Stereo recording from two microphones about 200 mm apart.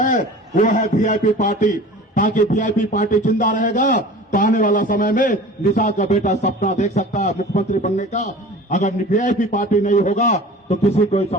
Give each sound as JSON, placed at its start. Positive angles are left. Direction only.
{"t": 0.0, "sound": "a man's voice", "side_deg": 40}